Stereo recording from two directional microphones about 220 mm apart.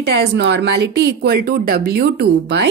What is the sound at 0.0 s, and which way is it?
Speech, 50° right (ahead or behind).